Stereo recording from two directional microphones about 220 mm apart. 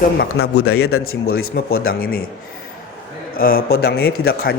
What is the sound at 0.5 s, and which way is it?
Speech, 80° left.